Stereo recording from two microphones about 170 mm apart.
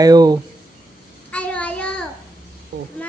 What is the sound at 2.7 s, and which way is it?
Vehicle, 75° right (ahead or behind).